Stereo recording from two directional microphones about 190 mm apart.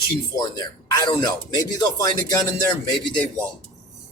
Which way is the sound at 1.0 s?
20° left (ahead or behind).